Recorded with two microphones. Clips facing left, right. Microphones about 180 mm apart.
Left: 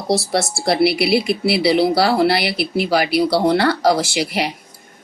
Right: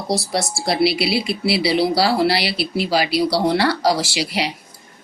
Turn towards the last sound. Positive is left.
turn(degrees=50)  # may be behind; listen again after turning